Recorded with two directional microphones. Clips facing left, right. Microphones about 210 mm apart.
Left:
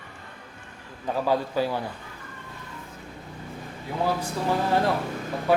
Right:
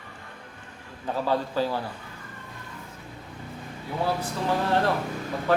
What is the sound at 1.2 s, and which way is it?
Speech, 10° left (ahead or behind).